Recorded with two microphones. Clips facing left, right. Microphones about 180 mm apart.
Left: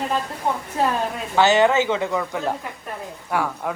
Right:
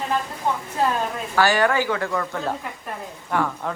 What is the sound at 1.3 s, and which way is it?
Speech, 20° left (ahead or behind).